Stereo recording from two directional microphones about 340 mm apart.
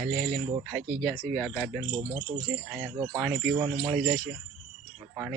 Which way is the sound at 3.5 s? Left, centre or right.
Centre.